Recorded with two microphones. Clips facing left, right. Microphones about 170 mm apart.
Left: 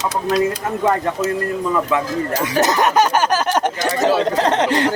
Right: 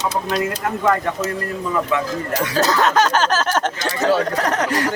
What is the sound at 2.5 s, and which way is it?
A man's voice, 20° left (ahead or behind).